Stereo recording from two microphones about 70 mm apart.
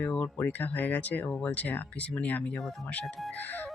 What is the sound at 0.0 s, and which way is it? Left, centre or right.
Speech, left.